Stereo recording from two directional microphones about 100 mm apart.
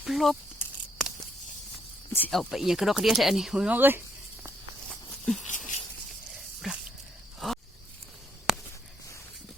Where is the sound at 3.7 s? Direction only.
20° right (ahead or behind).